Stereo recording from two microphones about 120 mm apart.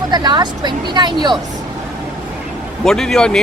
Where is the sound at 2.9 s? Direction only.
5° left (ahead or behind).